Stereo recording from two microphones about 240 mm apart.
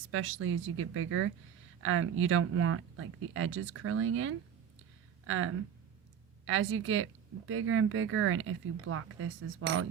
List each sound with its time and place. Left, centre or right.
0.1 s speech: right